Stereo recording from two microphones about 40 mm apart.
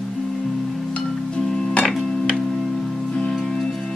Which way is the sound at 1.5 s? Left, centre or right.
Centre.